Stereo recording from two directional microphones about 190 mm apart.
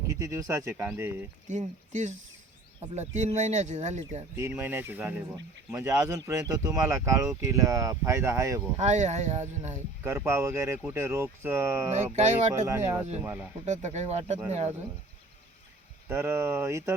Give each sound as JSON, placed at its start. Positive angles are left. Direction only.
{"t": 0.2, "sound": "speech", "side_deg": -15}
{"t": 1.5, "sound": "speech", "side_deg": -40}
{"t": 4.4, "sound": "speech", "side_deg": -10}
{"t": 8.8, "sound": "speech", "side_deg": -40}
{"t": 10.0, "sound": "speech", "side_deg": -15}
{"t": 11.9, "sound": "speech", "side_deg": -35}
{"t": 12.6, "sound": "speech", "side_deg": -15}
{"t": 13.7, "sound": "speech", "side_deg": -35}
{"t": 16.0, "sound": "speech", "side_deg": -15}